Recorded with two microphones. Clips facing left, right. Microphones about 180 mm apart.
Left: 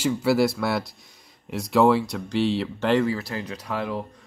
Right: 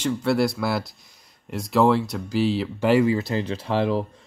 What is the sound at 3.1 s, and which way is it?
Speech, 25° right (ahead or behind).